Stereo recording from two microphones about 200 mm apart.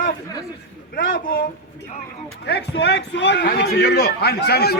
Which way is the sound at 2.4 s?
55° left (ahead or behind).